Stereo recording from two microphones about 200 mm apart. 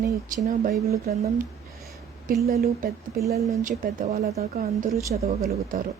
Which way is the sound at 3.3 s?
35° right (ahead or behind).